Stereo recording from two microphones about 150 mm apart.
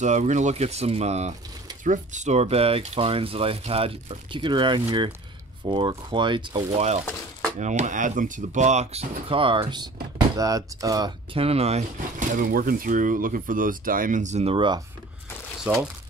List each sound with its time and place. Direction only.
0.0 s speech: 55° right (ahead or behind); by 6.7 s 30° right (ahead or behind)
7.5 s speech: 50° right (ahead or behind); by 11.1 s 25° right (ahead or behind)
11.3 s speech: 40° right (ahead or behind)
15.6 s speech: 5° right (ahead or behind)